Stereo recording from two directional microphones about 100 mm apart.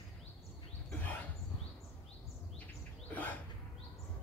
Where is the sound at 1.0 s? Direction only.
20° left (ahead or behind).